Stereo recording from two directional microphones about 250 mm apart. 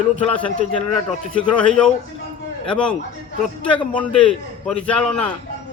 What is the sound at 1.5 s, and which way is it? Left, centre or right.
A man's voice, centre.